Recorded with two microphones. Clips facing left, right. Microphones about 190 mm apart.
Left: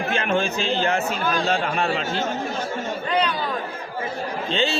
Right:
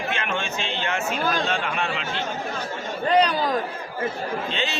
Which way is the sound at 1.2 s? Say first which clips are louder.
Left 1 dB; 40° right (ahead or behind).